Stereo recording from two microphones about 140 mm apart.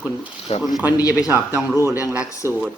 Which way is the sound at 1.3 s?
10° right (ahead or behind).